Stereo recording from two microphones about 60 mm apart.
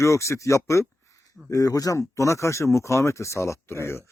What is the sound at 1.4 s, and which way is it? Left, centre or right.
Speech, left.